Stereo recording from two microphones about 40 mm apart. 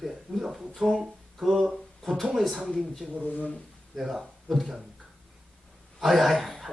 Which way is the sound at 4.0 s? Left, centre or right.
Centre.